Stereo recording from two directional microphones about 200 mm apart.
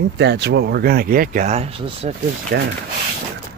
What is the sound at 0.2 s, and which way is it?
Speech, 55° right (ahead or behind).